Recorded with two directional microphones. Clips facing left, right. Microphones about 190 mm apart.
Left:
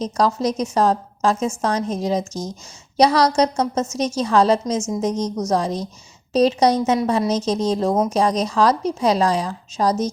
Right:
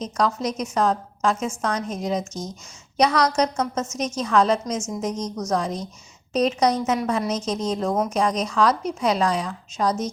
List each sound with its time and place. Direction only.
0.0 s a woman's voice: 35° left (ahead or behind)